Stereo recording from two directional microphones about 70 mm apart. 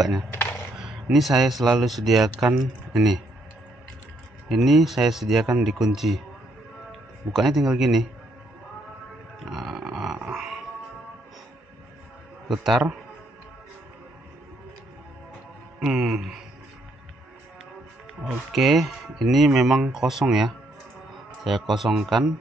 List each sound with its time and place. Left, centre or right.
0.3 s a sound: left
0.7 s speech: centre
4.5 s speech: centre
7.3 s speech: centre
9.4 s grunt: centre
12.4 s a man's voice: centre
15.8 s music: centre
18.5 s speech: centre